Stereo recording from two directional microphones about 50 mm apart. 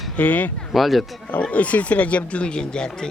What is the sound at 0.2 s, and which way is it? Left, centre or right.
Speech, left.